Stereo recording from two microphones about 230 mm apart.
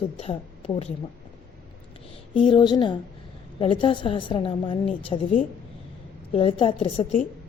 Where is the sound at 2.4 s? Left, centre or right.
Centre.